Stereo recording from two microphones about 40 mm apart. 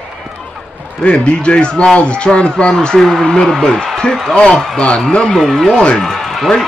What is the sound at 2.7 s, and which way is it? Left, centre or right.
Speech, centre.